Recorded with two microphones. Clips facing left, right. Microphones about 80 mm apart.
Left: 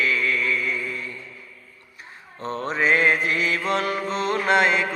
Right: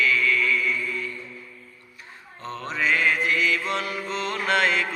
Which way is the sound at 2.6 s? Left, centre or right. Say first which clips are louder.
Left 3 dB; left.